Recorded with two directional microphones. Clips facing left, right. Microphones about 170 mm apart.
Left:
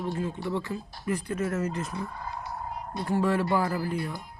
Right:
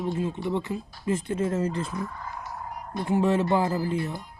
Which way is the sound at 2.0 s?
15° left (ahead or behind).